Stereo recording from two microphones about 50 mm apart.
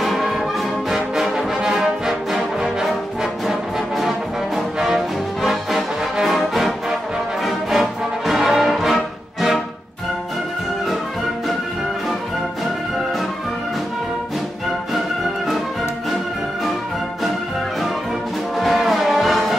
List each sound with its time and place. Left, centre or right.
0.0 s brass instrument: centre
4.6 s music: centre
15.2 s music: centre
18.6 s music: centre